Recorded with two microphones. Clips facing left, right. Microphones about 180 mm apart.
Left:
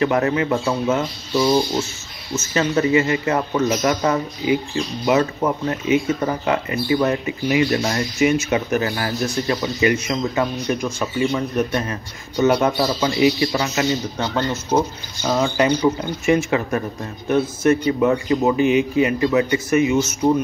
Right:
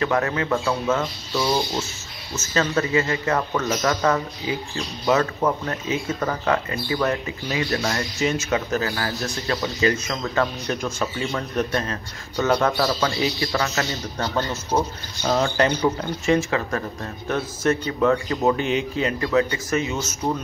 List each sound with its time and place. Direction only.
0.0 s a man's voice: 20° left (ahead or behind)
1.3 s speech: centre (ahead or behind)
2.5 s a man's voice: 20° left (ahead or behind)